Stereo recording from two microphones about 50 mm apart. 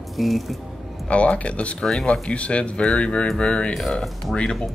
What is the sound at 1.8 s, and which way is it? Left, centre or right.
Speech, centre.